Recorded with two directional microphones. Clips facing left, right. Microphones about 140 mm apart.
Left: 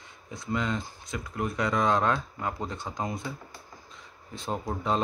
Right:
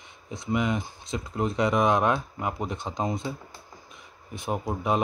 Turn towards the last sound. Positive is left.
turn(degrees=-15)  # may be behind; listen again after turning